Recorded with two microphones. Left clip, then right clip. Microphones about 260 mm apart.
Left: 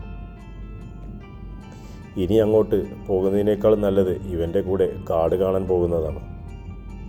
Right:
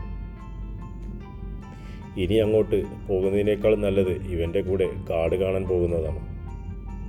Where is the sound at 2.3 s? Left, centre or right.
Centre.